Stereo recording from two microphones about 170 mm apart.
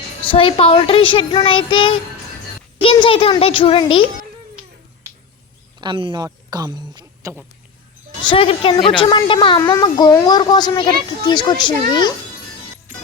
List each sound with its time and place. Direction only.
0.2 s a child's voice: 30° left (ahead or behind)
5.8 s speech: 25° right (ahead or behind)
8.2 s a child's voice: 30° left (ahead or behind)